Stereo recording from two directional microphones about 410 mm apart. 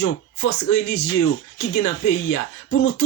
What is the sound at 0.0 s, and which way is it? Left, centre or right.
Speech, left.